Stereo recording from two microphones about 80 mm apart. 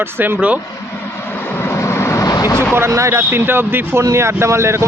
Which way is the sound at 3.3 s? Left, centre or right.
Right.